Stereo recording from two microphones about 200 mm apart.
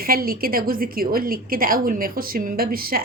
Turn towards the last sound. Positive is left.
turn(degrees=-45)  # may be behind; listen again after turning